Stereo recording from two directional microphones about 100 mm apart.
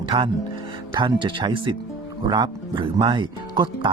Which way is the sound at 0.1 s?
65° right (ahead or behind).